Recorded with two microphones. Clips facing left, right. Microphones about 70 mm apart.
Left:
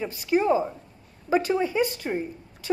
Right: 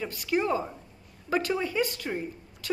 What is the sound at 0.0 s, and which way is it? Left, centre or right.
A woman's voice, centre.